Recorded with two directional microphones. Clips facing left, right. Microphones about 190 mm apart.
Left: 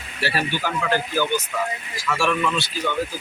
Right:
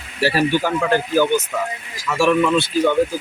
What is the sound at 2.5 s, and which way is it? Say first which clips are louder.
Speech: right 9 dB; 55° right (ahead or behind).